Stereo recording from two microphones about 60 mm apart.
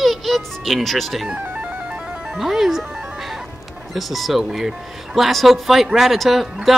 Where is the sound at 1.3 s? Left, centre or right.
Right.